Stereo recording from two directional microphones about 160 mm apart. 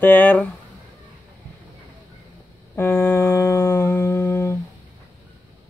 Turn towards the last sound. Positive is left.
turn(degrees=15)  # may be behind; listen again after turning